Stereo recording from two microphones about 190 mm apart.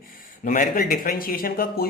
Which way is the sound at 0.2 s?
45° left (ahead or behind).